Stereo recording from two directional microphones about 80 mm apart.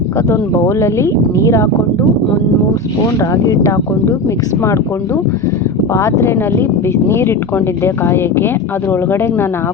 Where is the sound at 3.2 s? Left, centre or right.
Left.